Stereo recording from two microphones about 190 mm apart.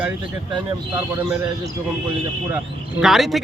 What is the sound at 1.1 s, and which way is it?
Speech, 15° right (ahead or behind).